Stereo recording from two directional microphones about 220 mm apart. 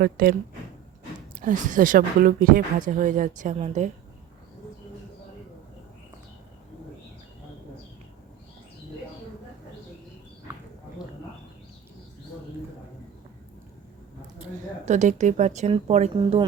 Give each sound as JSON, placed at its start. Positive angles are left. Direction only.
{"t": 0.0, "sound": "speech", "side_deg": -40}
{"t": 1.4, "sound": "speech", "side_deg": -35}
{"t": 14.8, "sound": "speech", "side_deg": -30}